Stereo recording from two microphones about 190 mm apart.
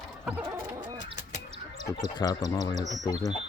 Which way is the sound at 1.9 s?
20° left (ahead or behind).